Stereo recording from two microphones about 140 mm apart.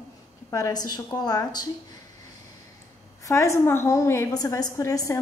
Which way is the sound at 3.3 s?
20° left (ahead or behind).